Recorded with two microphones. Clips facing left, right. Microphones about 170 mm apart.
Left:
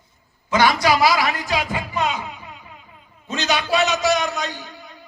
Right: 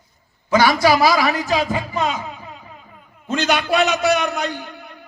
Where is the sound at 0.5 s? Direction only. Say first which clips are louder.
Right 3 dB; 40° right (ahead or behind).